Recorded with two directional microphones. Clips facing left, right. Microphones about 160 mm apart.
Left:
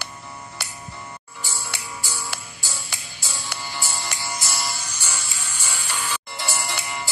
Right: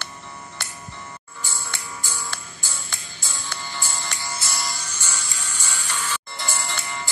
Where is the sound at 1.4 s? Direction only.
15° left (ahead or behind).